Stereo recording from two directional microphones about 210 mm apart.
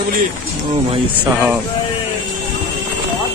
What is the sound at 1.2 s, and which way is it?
Speech, 10° right (ahead or behind).